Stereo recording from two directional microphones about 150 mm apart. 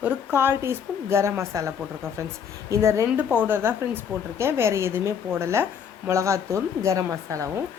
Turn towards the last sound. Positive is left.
turn(degrees=-20)  # may be behind; listen again after turning